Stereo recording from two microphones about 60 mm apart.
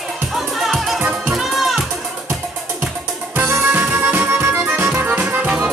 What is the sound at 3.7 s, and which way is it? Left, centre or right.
Music, right.